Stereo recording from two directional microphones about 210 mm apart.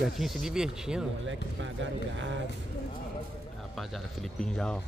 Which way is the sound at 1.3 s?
60° right (ahead or behind).